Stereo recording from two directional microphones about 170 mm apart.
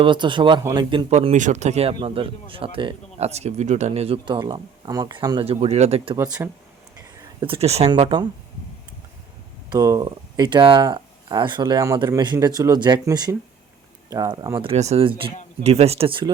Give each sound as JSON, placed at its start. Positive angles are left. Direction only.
{"t": 0.0, "sound": "speech", "side_deg": -30}
{"t": 1.1, "sound": "speech", "side_deg": -45}
{"t": 5.5, "sound": "speech", "side_deg": -40}
{"t": 6.1, "sound": "speech", "side_deg": -15}
{"t": 7.4, "sound": "speech", "side_deg": -35}
{"t": 9.6, "sound": "speech", "side_deg": -20}
{"t": 14.7, "sound": "speech", "side_deg": -35}